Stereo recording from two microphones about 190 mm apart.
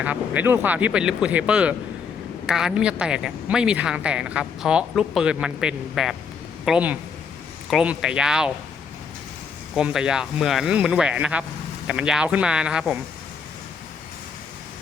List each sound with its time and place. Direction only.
0.0 s speech: 10° right (ahead or behind)
9.7 s speech: 5° right (ahead or behind)